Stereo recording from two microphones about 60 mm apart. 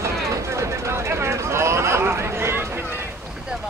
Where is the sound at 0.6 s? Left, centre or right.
Right.